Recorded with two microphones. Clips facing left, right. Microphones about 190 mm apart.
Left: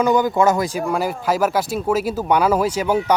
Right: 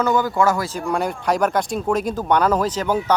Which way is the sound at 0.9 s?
5° left (ahead or behind).